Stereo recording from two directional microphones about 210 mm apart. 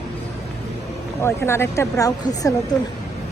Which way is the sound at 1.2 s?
10° left (ahead or behind).